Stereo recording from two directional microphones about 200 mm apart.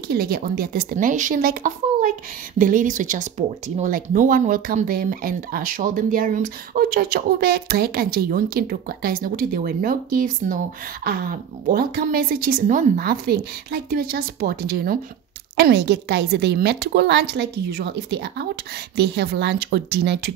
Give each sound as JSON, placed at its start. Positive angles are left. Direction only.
{"t": 0.1, "sound": "a woman's voice", "side_deg": -50}